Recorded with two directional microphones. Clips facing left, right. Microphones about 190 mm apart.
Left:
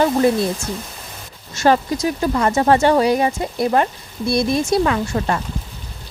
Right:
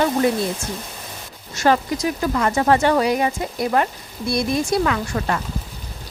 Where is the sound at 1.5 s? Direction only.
30° left (ahead or behind).